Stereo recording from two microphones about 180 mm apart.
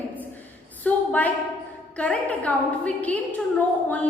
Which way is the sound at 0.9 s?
10° left (ahead or behind).